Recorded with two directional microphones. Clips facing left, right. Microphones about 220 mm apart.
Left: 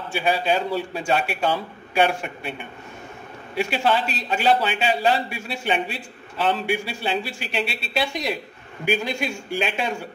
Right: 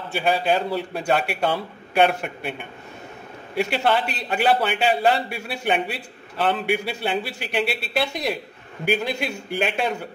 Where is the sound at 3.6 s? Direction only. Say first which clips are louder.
Right 1 dB; 55° right (ahead or behind).